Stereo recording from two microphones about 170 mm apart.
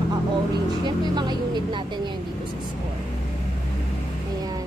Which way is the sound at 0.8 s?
25° right (ahead or behind).